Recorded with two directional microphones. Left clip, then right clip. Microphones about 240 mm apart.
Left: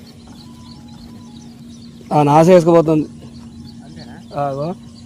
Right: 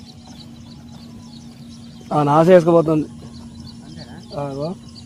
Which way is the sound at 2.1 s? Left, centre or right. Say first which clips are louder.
Left 2 dB; left.